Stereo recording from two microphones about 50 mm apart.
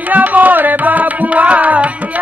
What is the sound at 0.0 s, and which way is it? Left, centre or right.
Tabla, right.